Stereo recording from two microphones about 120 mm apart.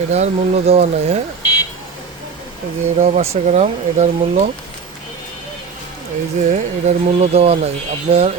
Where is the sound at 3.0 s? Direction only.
75° right (ahead or behind).